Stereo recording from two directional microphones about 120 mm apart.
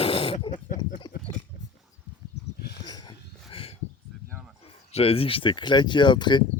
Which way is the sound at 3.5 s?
50° left (ahead or behind).